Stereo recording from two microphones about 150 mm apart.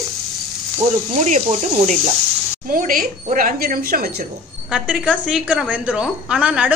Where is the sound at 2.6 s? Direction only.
70° right (ahead or behind); by 4.2 s 85° right.